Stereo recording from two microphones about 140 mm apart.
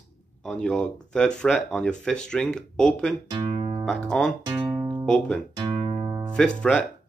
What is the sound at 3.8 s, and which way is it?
Speech, 5° left (ahead or behind).